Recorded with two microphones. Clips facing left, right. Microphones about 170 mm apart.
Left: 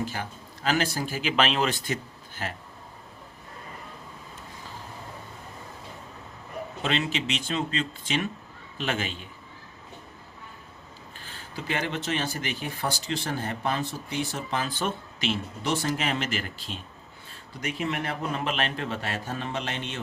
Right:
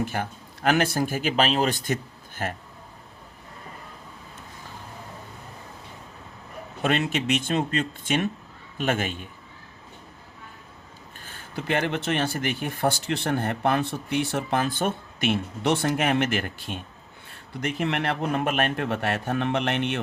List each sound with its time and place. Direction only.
0.0 s speech: 55° right (ahead or behind)
6.8 s speech: 50° right (ahead or behind)
11.2 s speech: 50° right (ahead or behind)